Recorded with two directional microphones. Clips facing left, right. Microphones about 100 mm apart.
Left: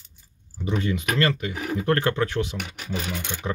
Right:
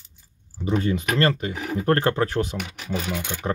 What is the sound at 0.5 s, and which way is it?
Speech, 35° right (ahead or behind).